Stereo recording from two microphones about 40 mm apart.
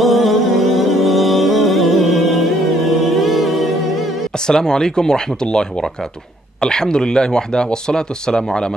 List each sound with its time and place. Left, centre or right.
0.0 s music: centre
4.5 s speech: centre